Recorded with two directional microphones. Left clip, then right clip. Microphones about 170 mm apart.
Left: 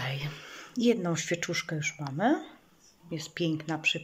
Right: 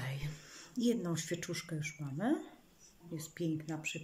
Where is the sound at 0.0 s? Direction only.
25° right (ahead or behind).